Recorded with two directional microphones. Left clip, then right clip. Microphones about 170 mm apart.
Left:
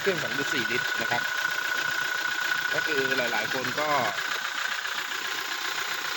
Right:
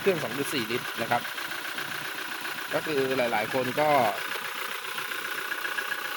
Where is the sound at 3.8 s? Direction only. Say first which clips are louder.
Right 4 dB; 30° right (ahead or behind).